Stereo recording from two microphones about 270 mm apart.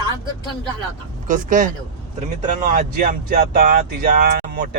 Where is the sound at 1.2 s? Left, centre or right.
Right.